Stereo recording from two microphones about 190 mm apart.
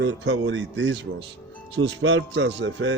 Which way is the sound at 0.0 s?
75° right (ahead or behind).